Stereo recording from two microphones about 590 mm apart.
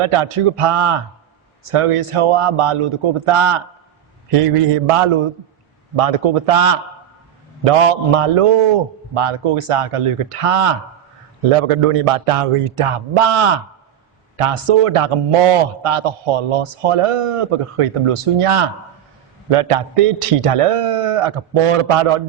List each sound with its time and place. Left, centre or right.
0.0 s speech: right
6.0 s speech: right